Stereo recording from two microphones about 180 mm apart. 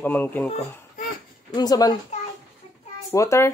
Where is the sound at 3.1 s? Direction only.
15° left (ahead or behind).